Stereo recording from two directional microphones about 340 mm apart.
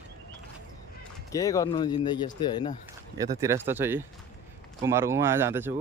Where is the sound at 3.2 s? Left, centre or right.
Centre.